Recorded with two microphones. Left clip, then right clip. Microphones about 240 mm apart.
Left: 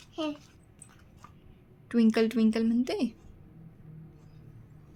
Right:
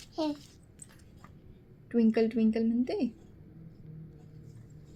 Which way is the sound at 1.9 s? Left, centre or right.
Left.